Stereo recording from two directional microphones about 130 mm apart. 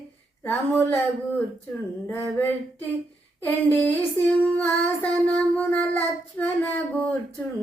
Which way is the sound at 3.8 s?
15° left (ahead or behind).